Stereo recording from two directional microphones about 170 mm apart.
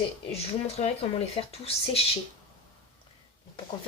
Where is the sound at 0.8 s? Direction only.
40° left (ahead or behind).